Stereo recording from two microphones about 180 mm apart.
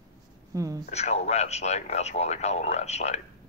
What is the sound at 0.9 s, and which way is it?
Speech, 40° left (ahead or behind).